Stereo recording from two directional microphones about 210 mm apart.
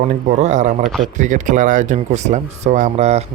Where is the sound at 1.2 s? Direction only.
35° right (ahead or behind).